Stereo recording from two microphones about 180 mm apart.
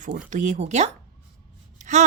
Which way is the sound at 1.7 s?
40° right (ahead or behind).